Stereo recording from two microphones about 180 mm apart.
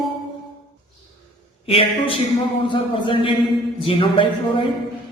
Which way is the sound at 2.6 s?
30° left (ahead or behind).